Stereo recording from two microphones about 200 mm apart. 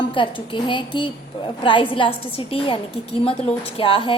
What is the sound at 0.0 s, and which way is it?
A woman's voice, 25° left (ahead or behind).